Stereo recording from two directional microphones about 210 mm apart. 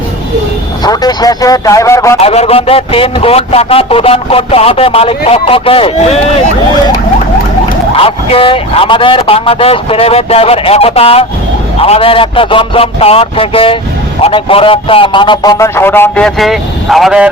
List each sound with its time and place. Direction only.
0.9 s a man's voice: 20° left (ahead or behind)
2.2 s a man's voice: 30° left (ahead or behind)
7.9 s a man's voice: 25° left (ahead or behind); by 17.2 s centre (ahead or behind)